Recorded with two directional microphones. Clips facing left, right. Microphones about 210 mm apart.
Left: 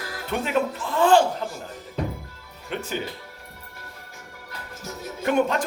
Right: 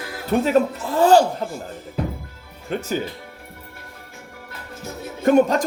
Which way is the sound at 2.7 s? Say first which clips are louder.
Right 5 dB; 40° right (ahead or behind).